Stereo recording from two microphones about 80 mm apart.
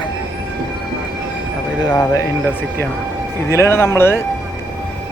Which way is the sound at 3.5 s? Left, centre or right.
Left.